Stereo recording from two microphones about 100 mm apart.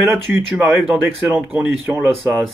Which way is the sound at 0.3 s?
15° right (ahead or behind).